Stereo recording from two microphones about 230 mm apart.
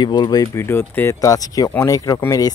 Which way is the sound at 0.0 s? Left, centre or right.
Centre.